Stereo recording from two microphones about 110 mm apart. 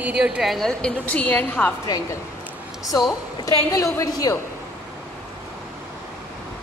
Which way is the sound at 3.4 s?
30° left (ahead or behind).